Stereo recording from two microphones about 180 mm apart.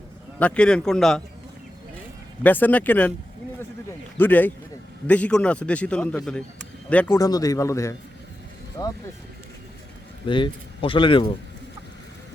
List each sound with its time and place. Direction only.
0.3 s a man's voice: 5° left (ahead or behind)
2.4 s a man's voice: 10° left (ahead or behind)
4.2 s a man's voice: 10° left (ahead or behind)
7.2 s speech: 20° left (ahead or behind)
10.2 s speech: 25° left (ahead or behind)